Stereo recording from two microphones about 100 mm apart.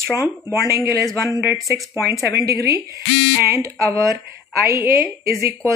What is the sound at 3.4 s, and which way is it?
A woman's voice, 30° right (ahead or behind).